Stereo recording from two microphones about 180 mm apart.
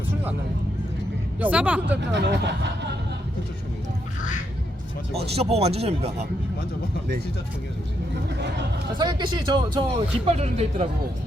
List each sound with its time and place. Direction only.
1.4 s speech: 10° right (ahead or behind)
2.0 s speech: 70° right (ahead or behind)
5.1 s speech: 35° right (ahead or behind)
9.0 s speech: 25° right (ahead or behind)
10.2 s speech: 35° right (ahead or behind)